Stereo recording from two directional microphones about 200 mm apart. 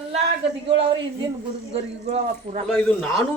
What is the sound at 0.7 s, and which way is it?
A man's voice, 25° right (ahead or behind).